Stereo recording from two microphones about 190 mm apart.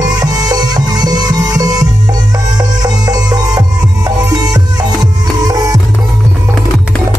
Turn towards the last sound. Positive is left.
turn(degrees=-20)  # may be behind; listen again after turning